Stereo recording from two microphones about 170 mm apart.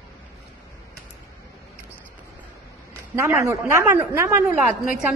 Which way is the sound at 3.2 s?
15° right (ahead or behind).